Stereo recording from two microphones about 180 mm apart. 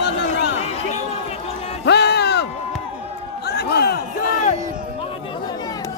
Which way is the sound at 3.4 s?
65° left (ahead or behind).